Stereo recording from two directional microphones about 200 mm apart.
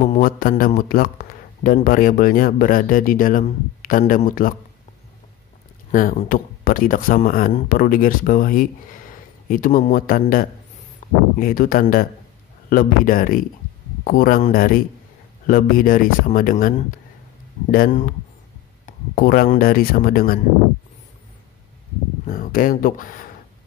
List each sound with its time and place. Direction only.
0.0 s speech: 40° left (ahead or behind)
5.9 s speech: 40° left (ahead or behind)
11.0 s a sound: 35° left (ahead or behind)
11.3 s speech: 45° left (ahead or behind)
22.2 s speech: 45° left (ahead or behind)